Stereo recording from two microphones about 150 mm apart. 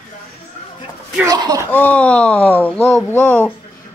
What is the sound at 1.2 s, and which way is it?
Speech, 25° right (ahead or behind).